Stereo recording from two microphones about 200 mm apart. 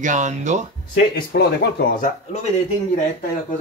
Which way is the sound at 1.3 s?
55° left (ahead or behind).